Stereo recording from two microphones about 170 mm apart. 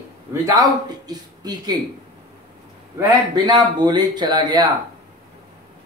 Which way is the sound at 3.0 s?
25° right (ahead or behind).